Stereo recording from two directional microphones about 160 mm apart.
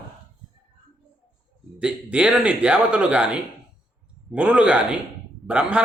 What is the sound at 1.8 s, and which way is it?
A man's voice, 5° right (ahead or behind).